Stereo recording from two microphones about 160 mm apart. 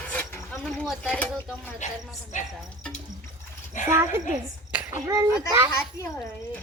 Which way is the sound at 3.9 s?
15° right (ahead or behind).